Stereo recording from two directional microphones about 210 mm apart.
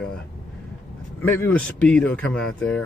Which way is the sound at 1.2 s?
10° left (ahead or behind).